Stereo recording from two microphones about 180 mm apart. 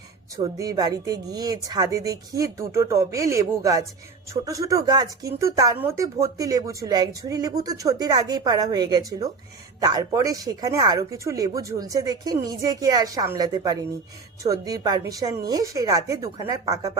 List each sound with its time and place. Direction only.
0.3 s speech: 20° right (ahead or behind)
3.3 s chopping: 15° right (ahead or behind)
4.4 s speech: 20° right (ahead or behind)
5.4 s chopping: 20° right (ahead or behind)
5.8 s speech: 15° right (ahead or behind)